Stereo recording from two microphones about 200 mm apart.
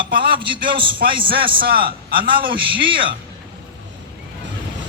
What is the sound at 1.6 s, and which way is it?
Speech, 45° right (ahead or behind).